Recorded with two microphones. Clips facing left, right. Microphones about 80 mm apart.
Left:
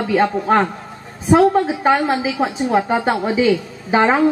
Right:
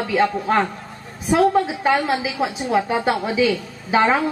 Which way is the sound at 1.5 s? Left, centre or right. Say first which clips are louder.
Left 3 dB; left.